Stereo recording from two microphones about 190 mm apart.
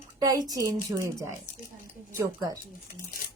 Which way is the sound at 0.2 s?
20° right (ahead or behind).